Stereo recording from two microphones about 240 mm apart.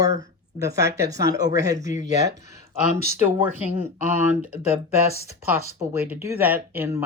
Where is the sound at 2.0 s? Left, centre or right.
Right.